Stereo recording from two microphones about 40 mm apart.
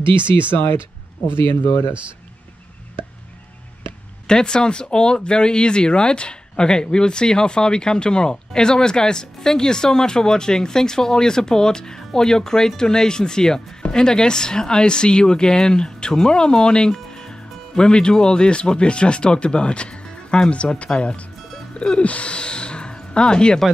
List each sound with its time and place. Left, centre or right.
0.5 s speech: left
4.3 s speech: left